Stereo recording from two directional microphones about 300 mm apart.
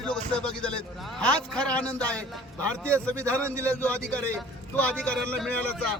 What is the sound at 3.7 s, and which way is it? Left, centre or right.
A man's voice, centre.